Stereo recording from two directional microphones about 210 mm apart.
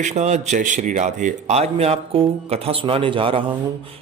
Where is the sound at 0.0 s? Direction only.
35° right (ahead or behind).